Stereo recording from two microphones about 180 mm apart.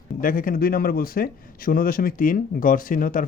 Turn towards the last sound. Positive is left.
turn(degrees=50)  # may be behind; listen again after turning